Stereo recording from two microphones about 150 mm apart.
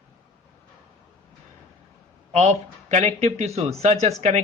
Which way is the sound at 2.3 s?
50° right (ahead or behind).